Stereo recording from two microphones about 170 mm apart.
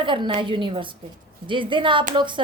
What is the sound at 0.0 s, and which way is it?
A woman's voice, 30° right (ahead or behind).